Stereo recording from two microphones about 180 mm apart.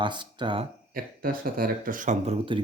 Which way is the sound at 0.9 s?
55° right (ahead or behind).